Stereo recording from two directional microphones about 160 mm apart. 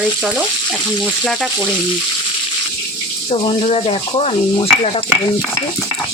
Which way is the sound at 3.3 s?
40° left (ahead or behind).